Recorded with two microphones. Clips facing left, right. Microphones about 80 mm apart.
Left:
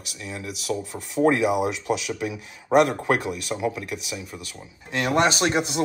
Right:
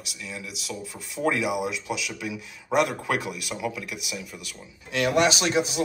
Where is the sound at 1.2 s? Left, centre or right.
Left.